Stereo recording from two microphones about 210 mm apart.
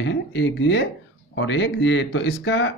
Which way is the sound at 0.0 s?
60° left (ahead or behind).